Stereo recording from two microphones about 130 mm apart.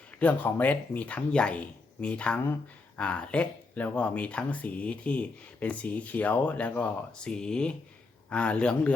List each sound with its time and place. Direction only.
0.2 s speech: 15° left (ahead or behind)